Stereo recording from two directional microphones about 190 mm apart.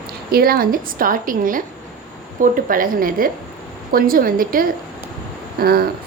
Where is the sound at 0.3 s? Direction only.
50° right (ahead or behind).